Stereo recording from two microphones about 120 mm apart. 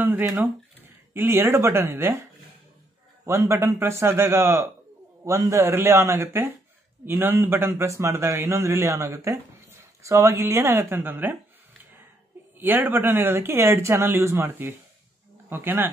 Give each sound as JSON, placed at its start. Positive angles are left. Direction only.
{"t": 0.0, "sound": "speech", "side_deg": -20}
{"t": 3.3, "sound": "a man's voice", "side_deg": -25}
{"t": 12.5, "sound": "a man's voice", "side_deg": -15}